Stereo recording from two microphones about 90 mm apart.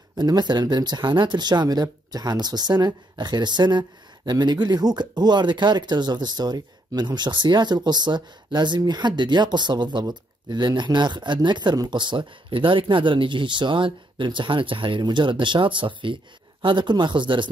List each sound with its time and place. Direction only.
0.2 s speech: 55° right (ahead or behind)